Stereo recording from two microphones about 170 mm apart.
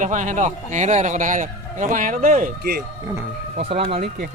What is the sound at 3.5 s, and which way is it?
Speech, 35° right (ahead or behind).